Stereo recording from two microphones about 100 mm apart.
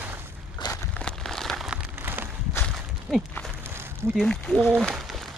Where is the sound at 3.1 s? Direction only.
5° left (ahead or behind).